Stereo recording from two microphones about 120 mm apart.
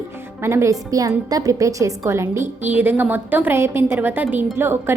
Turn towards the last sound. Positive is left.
turn(degrees=-20)  # may be behind; listen again after turning